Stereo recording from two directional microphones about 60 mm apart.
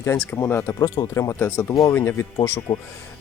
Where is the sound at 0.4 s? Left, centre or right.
Left.